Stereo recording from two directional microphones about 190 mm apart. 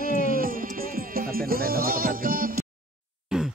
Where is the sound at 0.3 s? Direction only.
50° right (ahead or behind).